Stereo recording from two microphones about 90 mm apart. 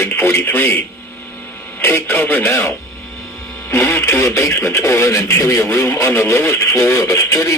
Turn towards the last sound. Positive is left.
turn(degrees=35)  # may be behind; listen again after turning